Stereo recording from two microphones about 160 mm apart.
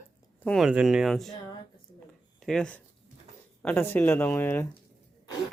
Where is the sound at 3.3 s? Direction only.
45° right (ahead or behind).